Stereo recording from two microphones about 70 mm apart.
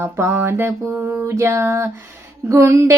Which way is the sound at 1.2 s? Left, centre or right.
Right.